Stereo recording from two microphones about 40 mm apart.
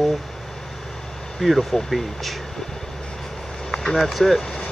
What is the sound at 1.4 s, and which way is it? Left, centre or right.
Speech, centre.